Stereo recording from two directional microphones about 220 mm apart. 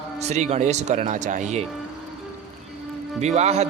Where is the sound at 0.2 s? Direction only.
30° right (ahead or behind).